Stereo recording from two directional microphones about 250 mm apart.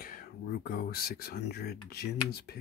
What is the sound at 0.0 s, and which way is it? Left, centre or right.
Speech, left.